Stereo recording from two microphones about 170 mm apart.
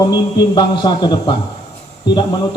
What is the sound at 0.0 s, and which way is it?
A man's voice, 25° left (ahead or behind).